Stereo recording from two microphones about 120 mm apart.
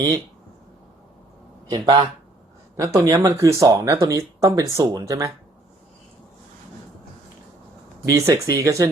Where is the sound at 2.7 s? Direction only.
25° right (ahead or behind).